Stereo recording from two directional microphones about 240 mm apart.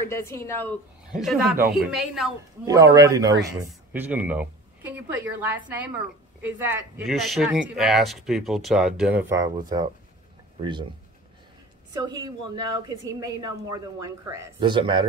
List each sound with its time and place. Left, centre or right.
0.1 s a woman's voice: centre
1.1 s speech: centre
2.6 s a woman's voice: centre
11.9 s a woman's voice: centre